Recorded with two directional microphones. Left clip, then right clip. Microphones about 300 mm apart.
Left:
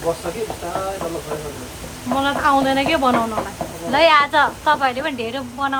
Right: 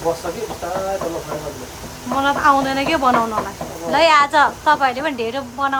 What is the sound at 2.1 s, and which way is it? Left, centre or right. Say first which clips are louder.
A woman's voice: right 2 dB; centre.